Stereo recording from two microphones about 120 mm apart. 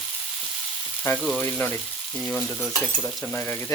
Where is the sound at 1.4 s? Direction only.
15° left (ahead or behind).